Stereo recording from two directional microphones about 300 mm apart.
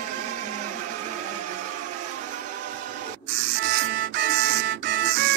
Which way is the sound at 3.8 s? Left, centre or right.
Right.